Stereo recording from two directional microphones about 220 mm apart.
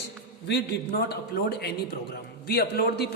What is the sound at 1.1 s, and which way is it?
A man's voice, 45° left (ahead or behind).